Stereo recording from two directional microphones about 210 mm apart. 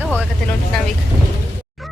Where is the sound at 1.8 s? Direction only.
Centre (ahead or behind).